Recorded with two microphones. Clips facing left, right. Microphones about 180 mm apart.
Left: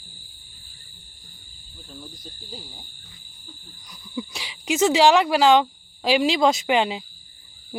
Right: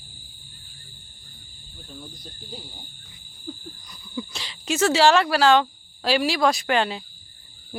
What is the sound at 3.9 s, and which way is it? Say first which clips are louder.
Speech: left 2 dB; 10° left (ahead or behind).